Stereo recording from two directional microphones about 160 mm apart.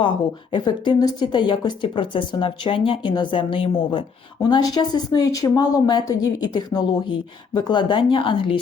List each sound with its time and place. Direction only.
0.5 s speech: 30° left (ahead or behind)